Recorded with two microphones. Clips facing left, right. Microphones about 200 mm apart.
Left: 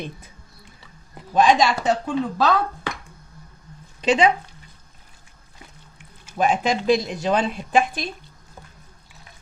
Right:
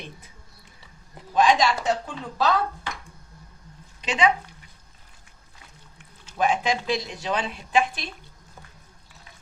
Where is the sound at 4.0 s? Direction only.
30° left (ahead or behind).